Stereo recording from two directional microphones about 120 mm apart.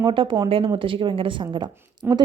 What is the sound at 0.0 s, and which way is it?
A woman's voice, 45° right (ahead or behind).